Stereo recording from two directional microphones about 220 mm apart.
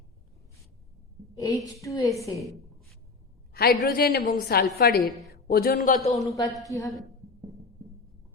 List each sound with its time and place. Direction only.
1.4 s a woman's voice: 15° left (ahead or behind)
3.5 s a woman's voice: 45° left (ahead or behind)
6.1 s a woman's voice: 15° left (ahead or behind)